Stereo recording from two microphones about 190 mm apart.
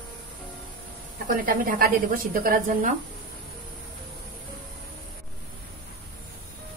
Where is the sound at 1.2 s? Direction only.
45° right (ahead or behind).